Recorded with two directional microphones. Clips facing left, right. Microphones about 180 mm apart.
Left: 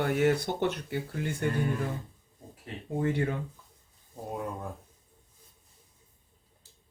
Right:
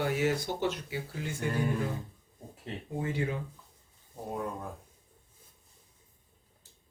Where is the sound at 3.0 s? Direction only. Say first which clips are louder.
Left 4 dB; 55° left (ahead or behind).